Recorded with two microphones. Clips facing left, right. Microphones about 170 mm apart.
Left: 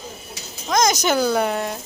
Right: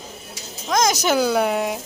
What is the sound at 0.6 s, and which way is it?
Speech, 5° right (ahead or behind).